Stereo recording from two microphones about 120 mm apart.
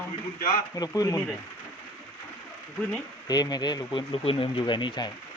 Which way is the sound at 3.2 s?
35° left (ahead or behind).